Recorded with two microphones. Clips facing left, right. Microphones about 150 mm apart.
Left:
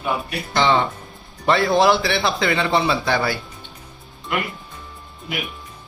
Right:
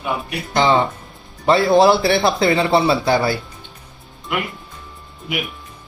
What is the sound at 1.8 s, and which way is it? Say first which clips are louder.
A man's voice: right 4 dB; 35° right (ahead or behind).